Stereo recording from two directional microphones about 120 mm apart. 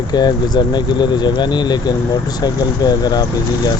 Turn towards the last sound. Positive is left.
turn(degrees=35)  # may be behind; listen again after turning